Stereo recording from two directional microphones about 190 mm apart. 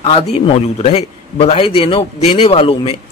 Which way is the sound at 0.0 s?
30° left (ahead or behind).